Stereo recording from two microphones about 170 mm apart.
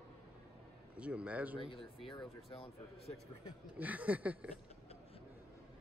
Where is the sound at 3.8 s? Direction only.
10° right (ahead or behind).